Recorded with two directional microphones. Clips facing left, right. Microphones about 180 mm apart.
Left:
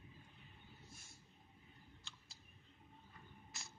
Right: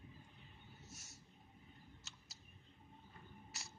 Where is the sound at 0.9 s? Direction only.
85° right.